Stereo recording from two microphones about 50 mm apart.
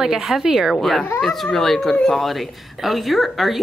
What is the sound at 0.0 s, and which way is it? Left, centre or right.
Speech, centre.